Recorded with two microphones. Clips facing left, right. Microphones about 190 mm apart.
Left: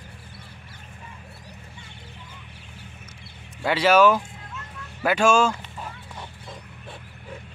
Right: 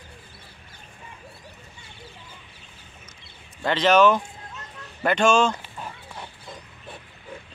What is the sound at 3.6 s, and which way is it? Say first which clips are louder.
Speech: even; 10° left (ahead or behind).